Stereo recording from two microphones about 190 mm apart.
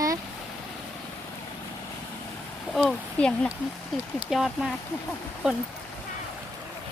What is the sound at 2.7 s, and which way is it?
Speech, 5° left (ahead or behind).